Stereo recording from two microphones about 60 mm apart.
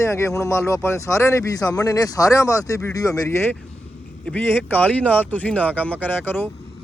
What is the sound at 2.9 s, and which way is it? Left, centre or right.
Speech, left.